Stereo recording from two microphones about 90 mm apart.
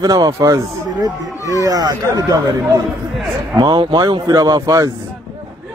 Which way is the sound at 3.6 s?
55° right (ahead or behind).